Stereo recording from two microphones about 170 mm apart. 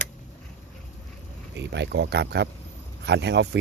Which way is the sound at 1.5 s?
90° right.